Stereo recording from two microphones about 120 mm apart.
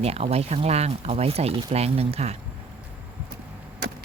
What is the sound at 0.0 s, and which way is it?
Speech, 60° right (ahead or behind).